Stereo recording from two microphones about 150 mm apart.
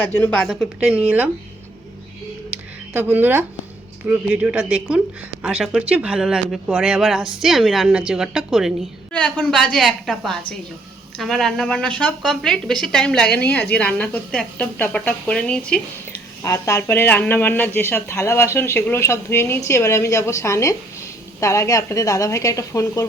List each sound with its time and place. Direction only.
0.0 s a woman's voice: 10° left (ahead or behind); by 1.3 s 10° right (ahead or behind)
2.9 s a woman's voice: 10° right (ahead or behind)
9.1 s a woman's voice: 10° left (ahead or behind)
16.4 s speech: 20° left (ahead or behind)